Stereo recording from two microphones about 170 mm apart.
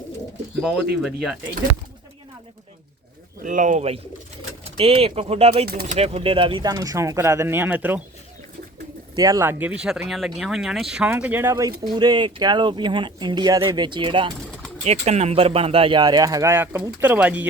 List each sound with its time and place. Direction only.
1.0 s speech: centre (ahead or behind)
3.4 s speech: 50° right (ahead or behind); by 8.0 s 10° right (ahead or behind)
9.1 s speech: 20° right (ahead or behind)
14.8 s speech: 40° right (ahead or behind); by 17.4 s 10° right (ahead or behind)